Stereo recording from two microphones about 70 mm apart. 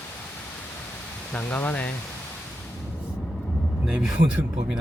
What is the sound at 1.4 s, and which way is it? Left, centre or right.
Speech, left.